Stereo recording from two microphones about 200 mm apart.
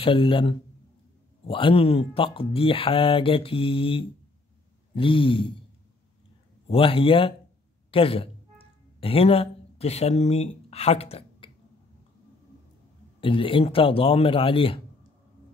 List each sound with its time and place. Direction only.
0.0 s speech: 25° left (ahead or behind)
6.7 s speech: 25° left (ahead or behind)
13.2 s speech: 25° left (ahead or behind)